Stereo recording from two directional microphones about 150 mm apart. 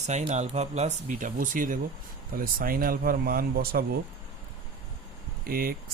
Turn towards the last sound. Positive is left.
turn(degrees=-85)